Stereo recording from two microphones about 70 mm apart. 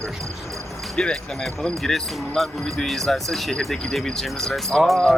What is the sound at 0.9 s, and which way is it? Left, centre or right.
Speech, centre.